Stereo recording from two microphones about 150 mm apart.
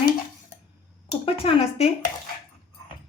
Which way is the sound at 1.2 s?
40° left (ahead or behind).